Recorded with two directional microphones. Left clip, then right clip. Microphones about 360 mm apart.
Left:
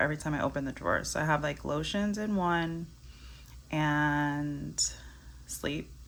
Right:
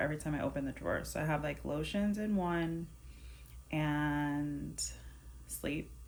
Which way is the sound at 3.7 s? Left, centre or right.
Centre.